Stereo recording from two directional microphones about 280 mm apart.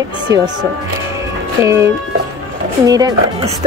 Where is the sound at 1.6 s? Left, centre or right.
Centre.